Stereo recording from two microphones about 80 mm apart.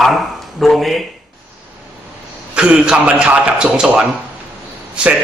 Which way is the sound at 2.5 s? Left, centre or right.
Centre.